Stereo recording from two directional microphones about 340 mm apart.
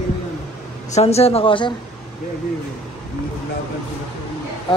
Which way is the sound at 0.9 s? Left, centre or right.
Centre.